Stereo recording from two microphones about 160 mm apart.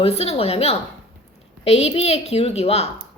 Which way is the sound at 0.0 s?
40° left (ahead or behind).